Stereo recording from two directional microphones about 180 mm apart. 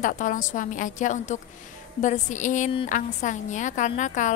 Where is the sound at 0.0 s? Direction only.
45° left (ahead or behind).